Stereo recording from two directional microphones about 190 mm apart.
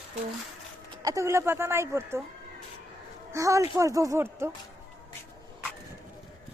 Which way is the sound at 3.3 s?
15° right (ahead or behind).